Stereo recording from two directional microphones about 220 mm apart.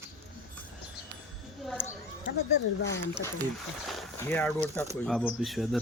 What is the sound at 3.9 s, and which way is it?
Speech, 5° left (ahead or behind).